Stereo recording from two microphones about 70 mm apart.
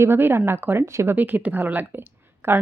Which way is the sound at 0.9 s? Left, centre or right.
Right.